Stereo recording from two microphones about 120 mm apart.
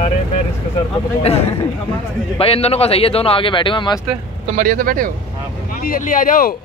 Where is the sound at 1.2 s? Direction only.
55° left (ahead or behind).